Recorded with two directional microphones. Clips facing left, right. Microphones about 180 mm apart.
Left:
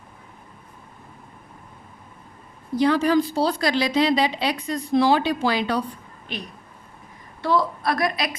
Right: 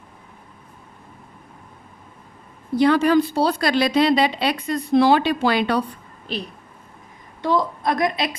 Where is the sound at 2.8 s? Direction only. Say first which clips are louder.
Right 3 dB; 65° right (ahead or behind).